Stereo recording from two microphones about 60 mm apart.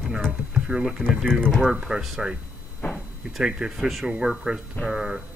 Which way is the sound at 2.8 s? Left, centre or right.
Left.